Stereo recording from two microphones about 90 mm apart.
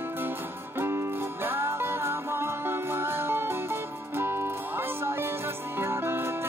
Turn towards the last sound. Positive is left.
turn(degrees=-25)  # may be behind; listen again after turning